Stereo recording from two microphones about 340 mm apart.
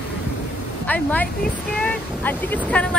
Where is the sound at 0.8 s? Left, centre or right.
Centre.